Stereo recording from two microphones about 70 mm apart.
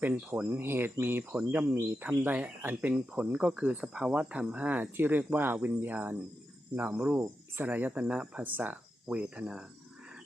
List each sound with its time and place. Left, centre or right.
0.0 s speech: right
3.4 s speech: centre